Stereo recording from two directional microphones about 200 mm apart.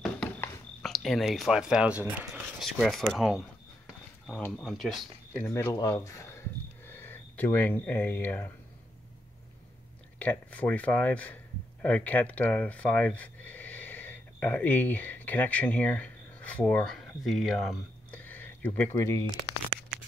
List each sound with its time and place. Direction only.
0.0 s a sound: 5° left (ahead or behind)
2.6 s speech: centre (ahead or behind)
10.1 s speech: 10° left (ahead or behind)